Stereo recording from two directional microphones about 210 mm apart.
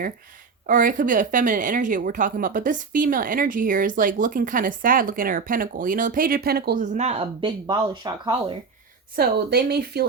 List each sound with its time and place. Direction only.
0.7 s a woman's voice: 40° right (ahead or behind); by 8.5 s 20° right (ahead or behind)
9.1 s speech: 45° right (ahead or behind)